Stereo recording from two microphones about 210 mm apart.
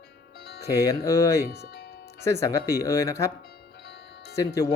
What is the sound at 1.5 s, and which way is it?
Music, 50° left (ahead or behind).